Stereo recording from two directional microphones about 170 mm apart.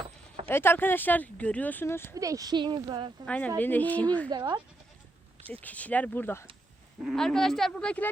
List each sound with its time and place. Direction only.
0.4 s speech: 15° left (ahead or behind)
2.1 s speech: 20° right (ahead or behind)
3.2 s speech: 10° left (ahead or behind)
4.3 s speech: 25° right (ahead or behind)
5.5 s speech: 10° left (ahead or behind)
7.0 s speech: centre (ahead or behind)